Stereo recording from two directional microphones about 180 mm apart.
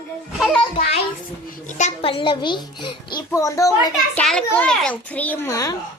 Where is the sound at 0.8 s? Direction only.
35° left (ahead or behind).